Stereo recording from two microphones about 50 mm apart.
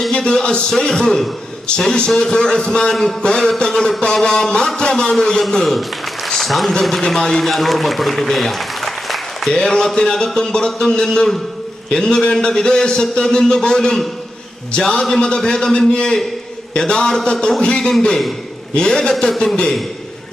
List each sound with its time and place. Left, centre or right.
0.1 s a man's voice: centre
2.9 s speech: centre
3.2 s a man's voice: centre
6.4 s a sound: centre
6.7 s a man's voice: centre
7.4 s speech: centre
9.5 s a man's voice: centre